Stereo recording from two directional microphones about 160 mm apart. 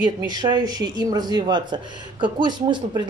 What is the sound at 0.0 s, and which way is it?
Speech, 25° right (ahead or behind).